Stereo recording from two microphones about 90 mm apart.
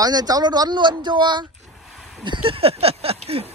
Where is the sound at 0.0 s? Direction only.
45° right (ahead or behind).